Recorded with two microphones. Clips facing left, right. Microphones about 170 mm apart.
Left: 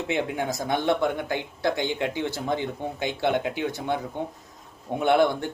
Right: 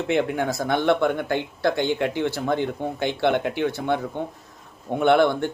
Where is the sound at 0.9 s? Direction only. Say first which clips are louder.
Right 4 dB; 60° right (ahead or behind).